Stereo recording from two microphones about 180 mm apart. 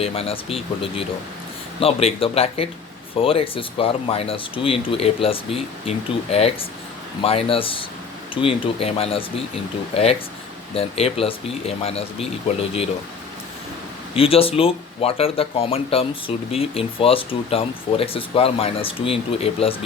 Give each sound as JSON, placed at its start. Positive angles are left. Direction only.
{"t": 0.0, "sound": "speech", "side_deg": 35}
{"t": 14.2, "sound": "speech", "side_deg": 30}